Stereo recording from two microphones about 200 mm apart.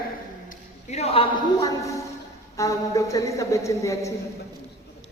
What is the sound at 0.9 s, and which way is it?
A man's voice, 30° left (ahead or behind).